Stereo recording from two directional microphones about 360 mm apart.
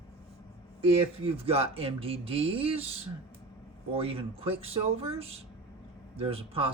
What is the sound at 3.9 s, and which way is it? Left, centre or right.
Speech, centre.